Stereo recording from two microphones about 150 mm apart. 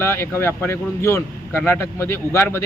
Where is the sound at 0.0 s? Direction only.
15° left (ahead or behind).